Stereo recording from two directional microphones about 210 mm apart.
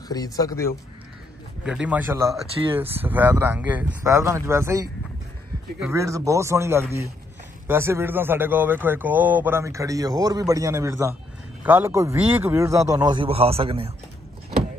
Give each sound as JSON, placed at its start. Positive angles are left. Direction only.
{"t": 0.1, "sound": "speech", "side_deg": 15}
{"t": 1.6, "sound": "a man's voice", "side_deg": -5}